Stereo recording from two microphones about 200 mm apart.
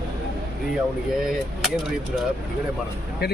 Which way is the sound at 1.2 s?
Centre (ahead or behind).